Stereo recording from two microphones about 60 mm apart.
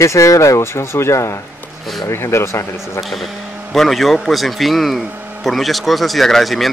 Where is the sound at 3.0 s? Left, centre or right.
Centre.